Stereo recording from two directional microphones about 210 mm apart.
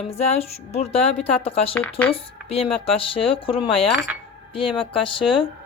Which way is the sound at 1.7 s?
10° left (ahead or behind).